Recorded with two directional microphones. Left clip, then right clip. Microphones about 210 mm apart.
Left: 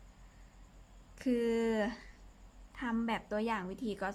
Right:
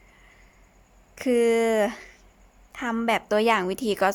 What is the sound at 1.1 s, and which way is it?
A woman's voice, 40° right (ahead or behind).